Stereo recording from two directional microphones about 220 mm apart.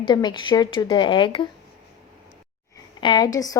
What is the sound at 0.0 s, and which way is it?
Speech, 20° left (ahead or behind).